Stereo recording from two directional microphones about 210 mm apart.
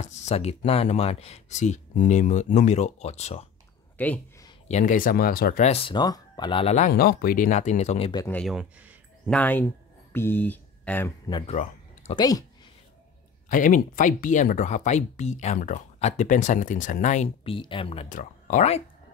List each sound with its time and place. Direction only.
0.0 s speech: 30° left (ahead or behind)
4.0 s speech: 10° left (ahead or behind)
4.6 s speech: 35° left (ahead or behind)
6.9 s speech: 45° left (ahead or behind)
8.1 s speech: 15° left (ahead or behind)
8.4 s a sound: centre (ahead or behind)
9.3 s speech: 10° left (ahead or behind)
11.2 s speech: 20° left (ahead or behind)
11.5 s a sound: 35° left (ahead or behind)
12.2 s speech: 15° left (ahead or behind)
13.5 s speech: 40° left (ahead or behind)